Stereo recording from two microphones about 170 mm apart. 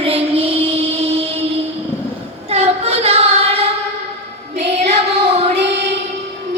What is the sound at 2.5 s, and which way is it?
Child singing, 40° right (ahead or behind).